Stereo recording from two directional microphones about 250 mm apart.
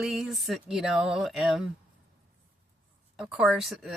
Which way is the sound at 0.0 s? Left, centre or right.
Centre.